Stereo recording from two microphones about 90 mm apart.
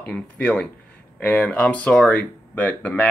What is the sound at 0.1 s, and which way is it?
Speech, 10° left (ahead or behind).